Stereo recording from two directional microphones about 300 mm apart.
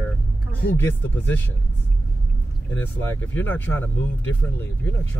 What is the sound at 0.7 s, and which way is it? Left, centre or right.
Speech, centre.